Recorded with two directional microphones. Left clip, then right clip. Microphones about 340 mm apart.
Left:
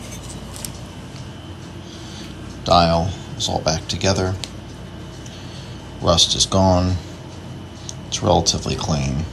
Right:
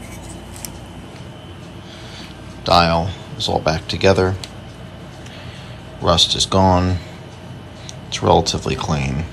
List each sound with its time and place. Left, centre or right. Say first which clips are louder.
2.6 s speech: right 1 dB; centre
6.0 s speech: right 1 dB; centre
8.1 s speech: right 2 dB; centre